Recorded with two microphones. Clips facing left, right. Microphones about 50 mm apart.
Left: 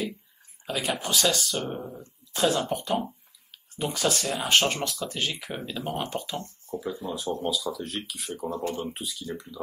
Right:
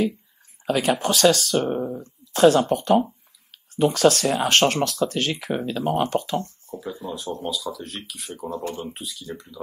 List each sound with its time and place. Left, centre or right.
0.7 s speech: right
2.3 s speech: right
6.7 s speech: centre